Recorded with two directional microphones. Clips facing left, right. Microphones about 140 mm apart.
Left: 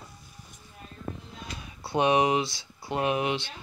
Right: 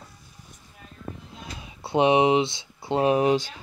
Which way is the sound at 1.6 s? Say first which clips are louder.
Right 4 dB; 25° right (ahead or behind).